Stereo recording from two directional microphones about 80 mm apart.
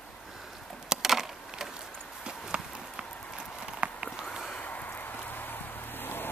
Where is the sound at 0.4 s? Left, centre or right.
Centre.